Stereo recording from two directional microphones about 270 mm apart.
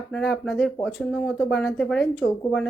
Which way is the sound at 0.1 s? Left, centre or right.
Centre.